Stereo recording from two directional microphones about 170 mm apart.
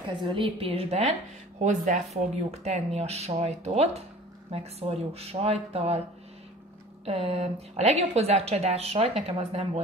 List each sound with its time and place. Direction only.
0.2 s speech: 30° right (ahead or behind)
7.1 s speech: 35° right (ahead or behind)